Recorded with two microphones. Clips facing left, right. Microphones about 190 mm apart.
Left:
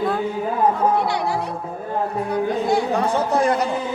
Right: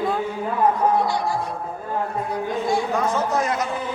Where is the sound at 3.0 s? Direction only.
30° left (ahead or behind).